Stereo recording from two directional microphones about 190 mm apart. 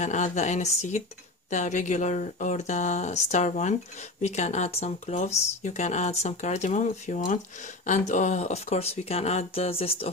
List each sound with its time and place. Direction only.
0.0 s speech: 40° left (ahead or behind)